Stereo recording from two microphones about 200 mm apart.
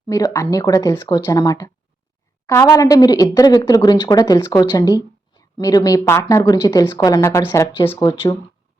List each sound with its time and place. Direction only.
0.1 s a woman's voice: 15° left (ahead or behind)